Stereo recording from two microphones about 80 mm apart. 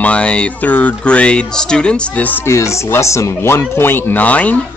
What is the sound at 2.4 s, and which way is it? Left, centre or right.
Speech, left.